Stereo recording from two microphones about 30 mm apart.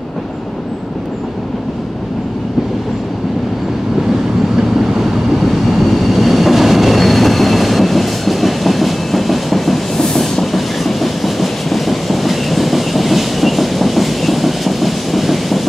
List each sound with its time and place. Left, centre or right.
4.6 s train: centre
5.4 s train: centre